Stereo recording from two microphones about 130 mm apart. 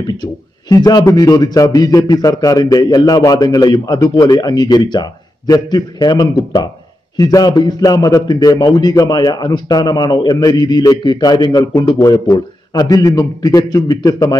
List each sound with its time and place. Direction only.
0.0 s a man's voice: 30° left (ahead or behind)